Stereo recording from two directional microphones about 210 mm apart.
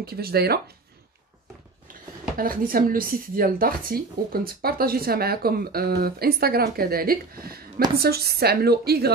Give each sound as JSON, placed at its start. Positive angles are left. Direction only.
{"t": 0.0, "sound": "speech", "side_deg": -50}
{"t": 2.3, "sound": "speech", "side_deg": -40}